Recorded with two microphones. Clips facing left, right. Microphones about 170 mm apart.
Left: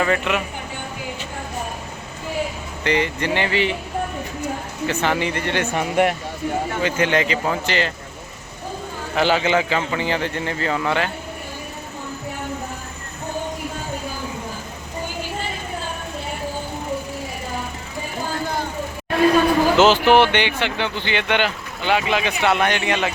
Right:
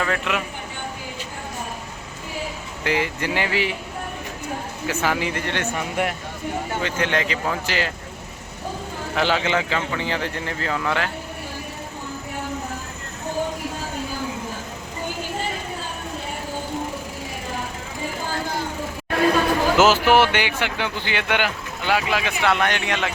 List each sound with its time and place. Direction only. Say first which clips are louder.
0.0 s a man's voice: left 4 dB; 5° left (ahead or behind)
2.8 s a man's voice: left 3 dB; 5° right (ahead or behind)
4.9 s a man's voice: left 2 dB; 5° right (ahead or behind)
5.7 s speech: left 9 dB; 65° left (ahead or behind)
6.8 s a man's voice: left 4 dB; 5° left (ahead or behind)
9.1 s a man's voice: left 3 dB; centre (ahead or behind)
19.7 s a man's voice: left 1 dB; 5° right (ahead or behind)